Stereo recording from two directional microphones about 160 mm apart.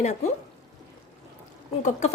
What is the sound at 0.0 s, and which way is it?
Speech, 45° left (ahead or behind).